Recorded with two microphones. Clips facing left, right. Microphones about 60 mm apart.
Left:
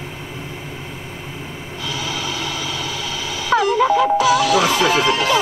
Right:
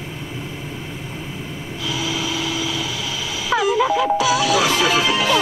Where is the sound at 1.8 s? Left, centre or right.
Left.